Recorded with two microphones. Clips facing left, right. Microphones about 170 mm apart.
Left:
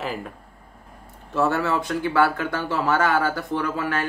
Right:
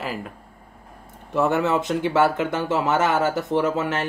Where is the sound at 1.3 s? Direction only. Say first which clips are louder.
Right 2 dB; 20° right (ahead or behind).